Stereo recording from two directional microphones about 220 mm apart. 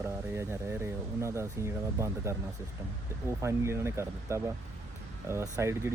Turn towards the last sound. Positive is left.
turn(degrees=-10)  # may be behind; listen again after turning